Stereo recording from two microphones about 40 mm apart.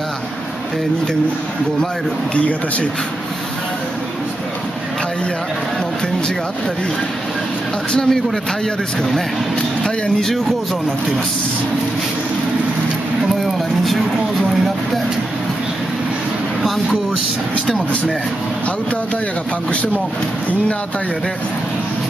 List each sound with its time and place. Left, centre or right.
2.3 s speech: left
7.9 s speech: centre
13.3 s a sound: centre